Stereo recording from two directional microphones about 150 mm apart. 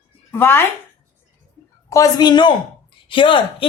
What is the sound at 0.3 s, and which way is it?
Speech, 15° left (ahead or behind).